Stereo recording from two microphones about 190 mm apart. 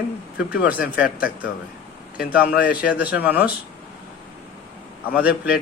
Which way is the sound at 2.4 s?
55° left (ahead or behind).